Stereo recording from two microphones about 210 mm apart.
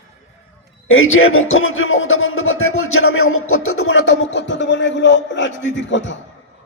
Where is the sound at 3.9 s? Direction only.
55° left (ahead or behind).